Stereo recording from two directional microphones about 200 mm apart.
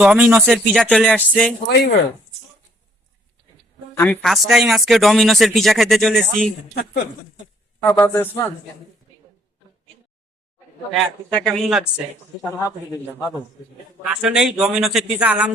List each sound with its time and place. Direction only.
0.0 s speech: 5° right (ahead or behind)
1.6 s speech: 55° left (ahead or behind)
3.9 s speech: 10° left (ahead or behind)
7.8 s speech: 10° left (ahead or behind)
10.9 s speech: centre (ahead or behind)
14.0 s speech: 5° right (ahead or behind)